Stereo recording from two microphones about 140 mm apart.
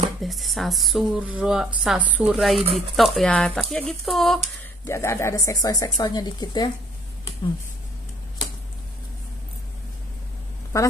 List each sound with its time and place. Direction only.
0.2 s a woman's voice: centre (ahead or behind)
4.8 s speech: 20° left (ahead or behind)
10.7 s speech: 20° left (ahead or behind)